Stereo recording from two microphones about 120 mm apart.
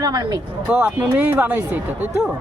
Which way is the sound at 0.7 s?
10° right (ahead or behind).